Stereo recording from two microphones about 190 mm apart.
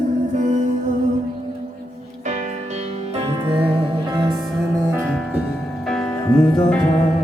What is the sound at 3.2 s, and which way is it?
Music, 30° right (ahead or behind).